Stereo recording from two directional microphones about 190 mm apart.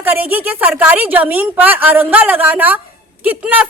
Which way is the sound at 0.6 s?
10° right (ahead or behind).